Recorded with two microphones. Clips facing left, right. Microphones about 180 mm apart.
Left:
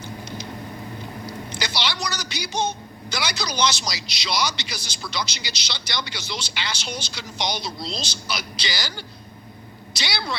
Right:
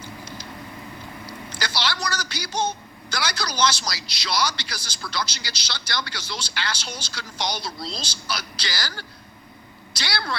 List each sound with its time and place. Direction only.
1.6 s music: 25° left (ahead or behind)
3.1 s speech: 25° left (ahead or behind)